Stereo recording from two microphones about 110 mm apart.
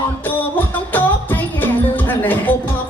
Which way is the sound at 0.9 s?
15° left (ahead or behind).